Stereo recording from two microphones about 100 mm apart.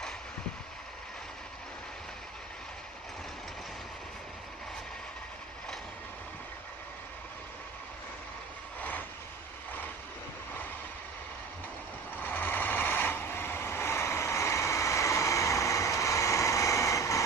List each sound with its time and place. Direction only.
8.8 s vehicle: 20° left (ahead or behind)
12.1 s vehicle: 20° left (ahead or behind)